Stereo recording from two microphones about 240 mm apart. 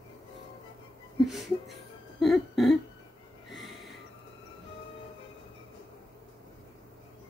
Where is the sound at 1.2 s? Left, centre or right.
Centre.